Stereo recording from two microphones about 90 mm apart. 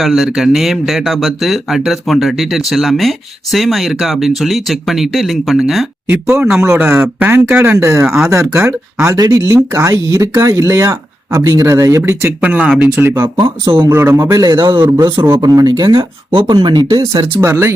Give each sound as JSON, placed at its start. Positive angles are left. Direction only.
{"t": 0.0, "sound": "speech", "side_deg": 0}
{"t": 6.1, "sound": "speech", "side_deg": -25}
{"t": 9.1, "sound": "speech", "side_deg": -40}
{"t": 12.5, "sound": "speech", "side_deg": -15}
{"t": 12.8, "sound": "speech", "side_deg": -25}
{"t": 15.1, "sound": "speech", "side_deg": -25}
{"t": 15.4, "sound": "speech", "side_deg": -45}
{"t": 16.3, "sound": "speech", "side_deg": -75}
{"t": 16.6, "sound": "speech", "side_deg": -55}
{"t": 17.3, "sound": "speech", "side_deg": -25}